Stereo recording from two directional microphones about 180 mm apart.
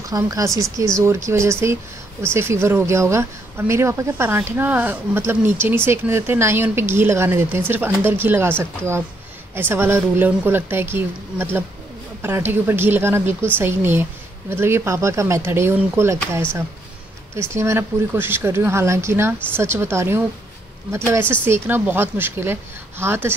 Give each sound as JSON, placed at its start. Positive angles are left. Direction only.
{"t": 0.1, "sound": "speech", "side_deg": -20}
{"t": 17.4, "sound": "speech", "side_deg": -15}